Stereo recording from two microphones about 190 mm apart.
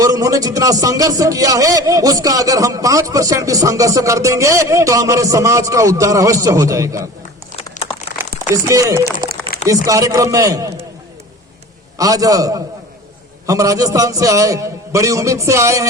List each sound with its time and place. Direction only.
0.0 s a man's voice: 20° right (ahead or behind)
7.5 s crumpling: 30° left (ahead or behind)
8.6 s a man's voice: 15° right (ahead or behind)
11.9 s a man's voice: 20° right (ahead or behind)